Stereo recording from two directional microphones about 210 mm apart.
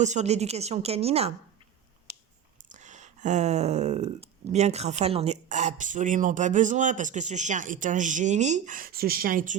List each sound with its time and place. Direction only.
0.0 s speech: 35° right (ahead or behind)
2.7 s speech: 35° right (ahead or behind)